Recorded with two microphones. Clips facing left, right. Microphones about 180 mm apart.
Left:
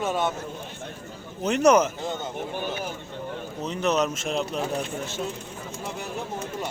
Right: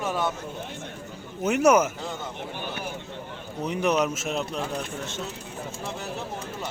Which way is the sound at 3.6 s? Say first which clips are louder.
Right 1 dB; 10° right (ahead or behind).